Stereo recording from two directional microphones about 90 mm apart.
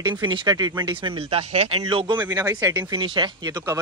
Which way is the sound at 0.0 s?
60° right (ahead or behind).